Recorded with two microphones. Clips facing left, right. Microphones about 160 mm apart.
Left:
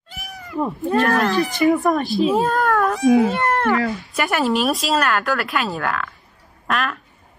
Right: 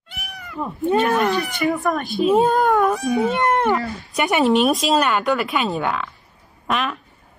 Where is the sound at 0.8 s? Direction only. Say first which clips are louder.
Right 1 dB; centre (ahead or behind).